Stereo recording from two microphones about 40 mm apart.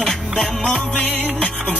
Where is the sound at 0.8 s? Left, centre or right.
Left.